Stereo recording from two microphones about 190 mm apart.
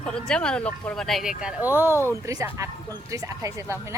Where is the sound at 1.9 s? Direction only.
15° left (ahead or behind).